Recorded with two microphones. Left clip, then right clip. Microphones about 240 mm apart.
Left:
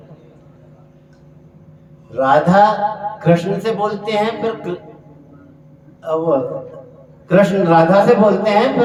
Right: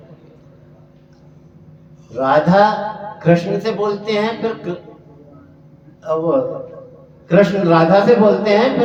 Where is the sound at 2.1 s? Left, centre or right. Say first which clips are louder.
Left 1 dB; centre.